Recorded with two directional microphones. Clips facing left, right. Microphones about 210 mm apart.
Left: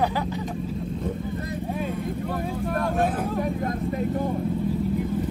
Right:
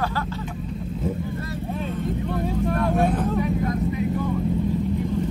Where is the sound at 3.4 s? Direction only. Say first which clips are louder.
Right 3 dB; 50° left (ahead or behind).